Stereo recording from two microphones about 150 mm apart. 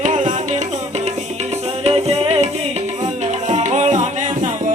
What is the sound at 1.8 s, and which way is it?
Music, 40° right (ahead or behind).